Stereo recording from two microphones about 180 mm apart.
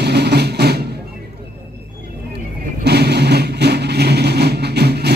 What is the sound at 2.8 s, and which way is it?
Vehicle, 65° right (ahead or behind).